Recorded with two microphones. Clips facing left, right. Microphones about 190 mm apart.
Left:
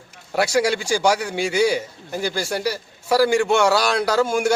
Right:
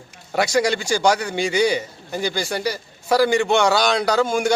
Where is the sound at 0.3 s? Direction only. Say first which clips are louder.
Even; 5° left (ahead or behind).